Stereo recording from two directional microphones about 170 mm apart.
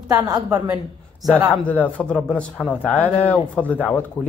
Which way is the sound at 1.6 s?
10° left (ahead or behind).